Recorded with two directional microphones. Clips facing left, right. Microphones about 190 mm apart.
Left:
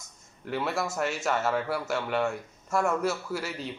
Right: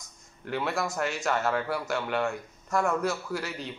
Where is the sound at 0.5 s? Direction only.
5° left (ahead or behind).